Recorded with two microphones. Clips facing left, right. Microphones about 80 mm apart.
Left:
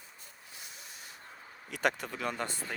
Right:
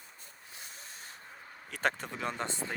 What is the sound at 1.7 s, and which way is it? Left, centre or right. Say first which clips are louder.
Speech: left 1 dB; right.